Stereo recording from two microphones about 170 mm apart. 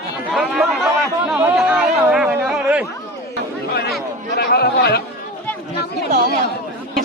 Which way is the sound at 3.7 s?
70° left (ahead or behind).